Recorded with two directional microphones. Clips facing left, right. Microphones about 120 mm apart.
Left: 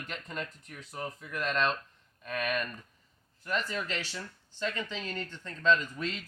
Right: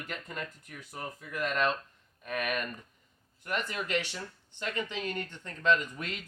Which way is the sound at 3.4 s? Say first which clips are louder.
Left 1 dB; 15° right (ahead or behind).